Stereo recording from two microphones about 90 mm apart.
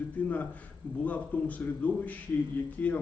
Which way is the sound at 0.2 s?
20° left (ahead or behind).